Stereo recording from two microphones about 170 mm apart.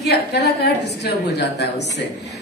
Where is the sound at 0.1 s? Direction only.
75° left (ahead or behind).